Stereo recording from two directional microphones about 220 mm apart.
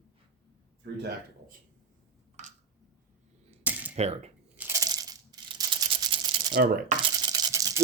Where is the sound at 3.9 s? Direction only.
30° right (ahead or behind).